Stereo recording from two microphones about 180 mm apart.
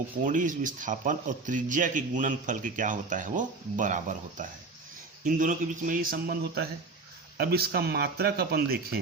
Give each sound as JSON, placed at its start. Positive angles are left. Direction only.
{"t": 0.3, "sound": "speech", "side_deg": -45}